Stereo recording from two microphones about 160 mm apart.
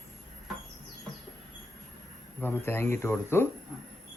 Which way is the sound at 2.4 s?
15° left (ahead or behind).